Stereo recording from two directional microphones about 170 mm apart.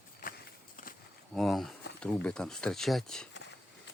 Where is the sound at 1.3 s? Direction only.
Centre (ahead or behind).